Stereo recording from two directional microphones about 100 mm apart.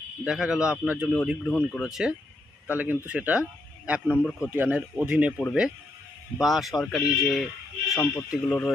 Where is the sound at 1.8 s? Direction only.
5° right (ahead or behind).